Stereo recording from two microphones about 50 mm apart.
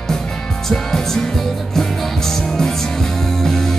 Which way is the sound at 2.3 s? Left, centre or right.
Centre.